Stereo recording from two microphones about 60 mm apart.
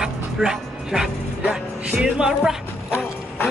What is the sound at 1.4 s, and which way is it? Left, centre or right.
Speech, right.